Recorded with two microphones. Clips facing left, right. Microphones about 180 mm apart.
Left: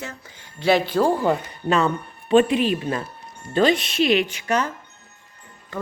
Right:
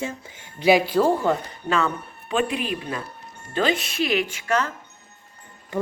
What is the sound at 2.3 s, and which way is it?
Speech, 35° left (ahead or behind).